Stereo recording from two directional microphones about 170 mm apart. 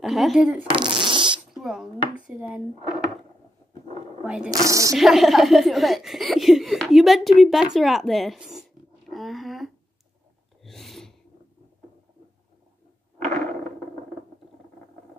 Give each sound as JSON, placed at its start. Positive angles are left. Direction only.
{"t": 0.0, "sound": "speech", "side_deg": 0}
{"t": 0.7, "sound": "fart", "side_deg": -30}
{"t": 1.5, "sound": "speech", "side_deg": 0}
{"t": 4.5, "sound": "speech", "side_deg": -20}
{"t": 4.9, "sound": "speech", "side_deg": 0}
{"t": 9.1, "sound": "a sound", "side_deg": 0}
{"t": 10.6, "sound": "sneeze", "side_deg": 0}